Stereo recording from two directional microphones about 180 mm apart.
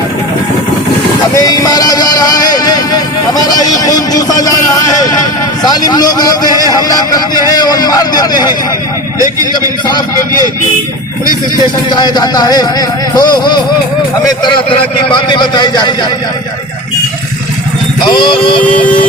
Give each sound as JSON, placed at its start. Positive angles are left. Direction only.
{"t": 1.4, "sound": "vehicle", "side_deg": 20}
{"t": 4.4, "sound": "a man's voice", "side_deg": 20}
{"t": 9.1, "sound": "a man's voice", "side_deg": -20}
{"t": 9.5, "sound": "a man's voice", "side_deg": 25}
{"t": 11.9, "sound": "a man's voice", "side_deg": 25}
{"t": 18.2, "sound": "a man's voice", "side_deg": 30}